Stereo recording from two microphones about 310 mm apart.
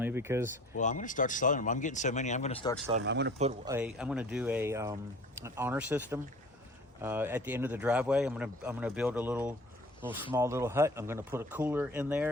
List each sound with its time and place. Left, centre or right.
0.0 s speech: centre
0.8 s speech: left
3.0 s speech: right
3.7 s speech: centre